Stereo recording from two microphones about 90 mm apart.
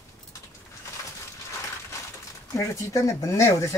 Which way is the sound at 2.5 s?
35° left (ahead or behind).